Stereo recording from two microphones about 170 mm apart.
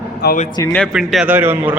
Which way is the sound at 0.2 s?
75° left (ahead or behind).